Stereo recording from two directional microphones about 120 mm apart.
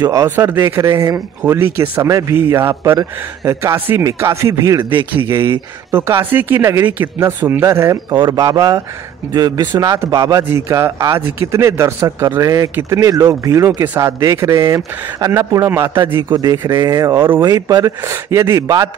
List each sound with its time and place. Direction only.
0.0 s speech: 25° right (ahead or behind)
1.4 s speech: 20° right (ahead or behind)
5.9 s speech: 20° right (ahead or behind)
8.1 s speech: 35° right (ahead or behind)